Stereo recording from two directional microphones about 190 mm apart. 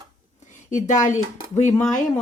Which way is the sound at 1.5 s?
40° left (ahead or behind).